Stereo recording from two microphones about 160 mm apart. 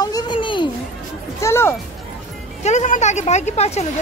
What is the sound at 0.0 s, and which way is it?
Children playing, 25° left (ahead or behind).